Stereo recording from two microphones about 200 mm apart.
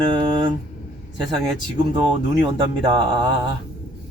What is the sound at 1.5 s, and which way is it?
Speech, 25° right (ahead or behind).